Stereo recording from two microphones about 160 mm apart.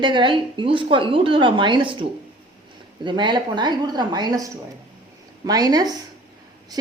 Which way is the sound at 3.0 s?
30° right (ahead or behind).